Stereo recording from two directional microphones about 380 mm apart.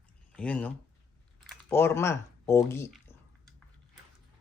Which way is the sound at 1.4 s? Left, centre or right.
Centre.